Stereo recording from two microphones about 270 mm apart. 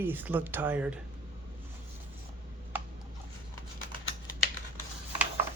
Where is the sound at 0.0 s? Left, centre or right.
Centre.